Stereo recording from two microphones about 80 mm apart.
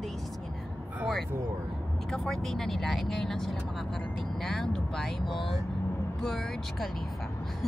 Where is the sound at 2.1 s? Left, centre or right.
Centre.